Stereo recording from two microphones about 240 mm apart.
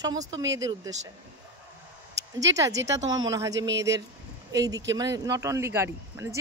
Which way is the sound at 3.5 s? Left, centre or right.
Right.